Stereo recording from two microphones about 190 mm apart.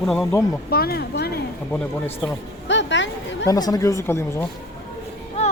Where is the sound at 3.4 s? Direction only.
20° left (ahead or behind).